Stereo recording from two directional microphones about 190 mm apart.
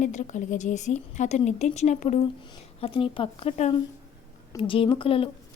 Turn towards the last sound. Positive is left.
turn(degrees=30)  # may be behind; listen again after turning